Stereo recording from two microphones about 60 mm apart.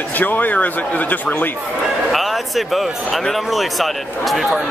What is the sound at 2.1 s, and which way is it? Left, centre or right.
Speech, centre.